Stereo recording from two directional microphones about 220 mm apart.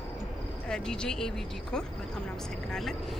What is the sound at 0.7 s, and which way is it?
Speech, 5° left (ahead or behind).